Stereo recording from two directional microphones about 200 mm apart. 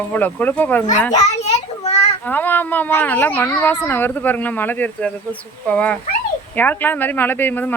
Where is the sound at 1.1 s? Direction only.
35° left (ahead or behind).